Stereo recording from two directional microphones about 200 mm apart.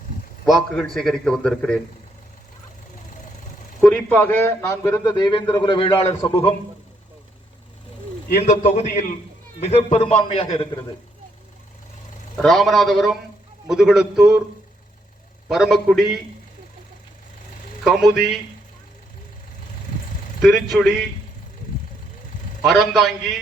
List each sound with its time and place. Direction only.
0.4 s a man's voice: centre (ahead or behind)
3.8 s a man's voice: 5° left (ahead or behind); by 6.5 s 25° left (ahead or behind)
8.4 s a man's voice: 35° left (ahead or behind)
12.4 s a man's voice: centre (ahead or behind)
15.4 s a man's voice: centre (ahead or behind)
17.8 s a man's voice: centre (ahead or behind)
20.4 s a man's voice: centre (ahead or behind)
22.6 s a man's voice: centre (ahead or behind)